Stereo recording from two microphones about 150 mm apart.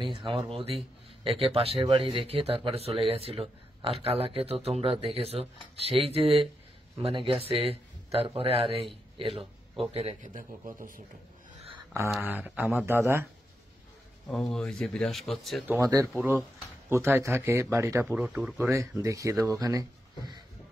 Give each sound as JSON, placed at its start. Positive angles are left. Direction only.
{"t": 0.0, "sound": "a man's voice", "side_deg": -35}
{"t": 12.2, "sound": "speech", "side_deg": -10}
{"t": 14.2, "sound": "speech", "side_deg": 5}
{"t": 15.8, "sound": "speech", "side_deg": -25}
{"t": 16.1, "sound": "speech", "side_deg": -5}
{"t": 16.9, "sound": "speech", "side_deg": -15}
{"t": 18.0, "sound": "speech", "side_deg": -5}
{"t": 18.7, "sound": "speech", "side_deg": -20}